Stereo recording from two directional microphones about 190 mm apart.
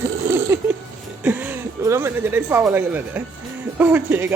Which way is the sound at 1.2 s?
10° right (ahead or behind).